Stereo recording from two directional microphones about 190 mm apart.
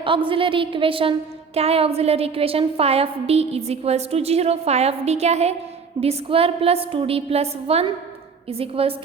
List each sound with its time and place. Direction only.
0.3 s a woman's voice: 25° right (ahead or behind)